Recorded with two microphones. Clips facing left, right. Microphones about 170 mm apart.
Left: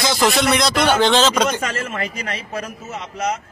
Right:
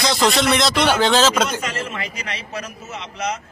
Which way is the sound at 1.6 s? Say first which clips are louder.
Left 2 dB; 50° left (ahead or behind).